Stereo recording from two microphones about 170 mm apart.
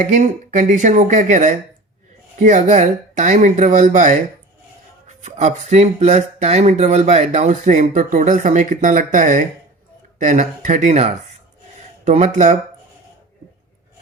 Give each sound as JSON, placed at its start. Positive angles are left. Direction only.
{"t": 0.0, "sound": "speech", "side_deg": -45}